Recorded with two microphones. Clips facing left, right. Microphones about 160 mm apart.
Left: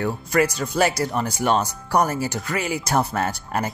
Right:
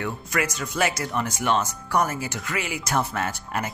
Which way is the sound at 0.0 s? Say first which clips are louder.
Left 6 dB; 35° left (ahead or behind).